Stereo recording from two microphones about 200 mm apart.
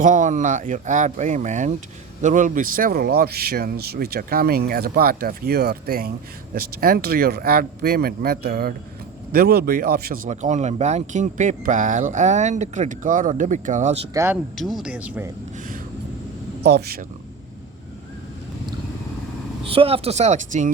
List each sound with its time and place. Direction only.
0.0 s speech: 40° right (ahead or behind)
10.2 s speech: 35° right (ahead or behind)
14.1 s speech: 15° right (ahead or behind)
14.5 s speech: centre (ahead or behind)
16.6 s speech: 55° right (ahead or behind)
19.6 s speech: 30° right (ahead or behind)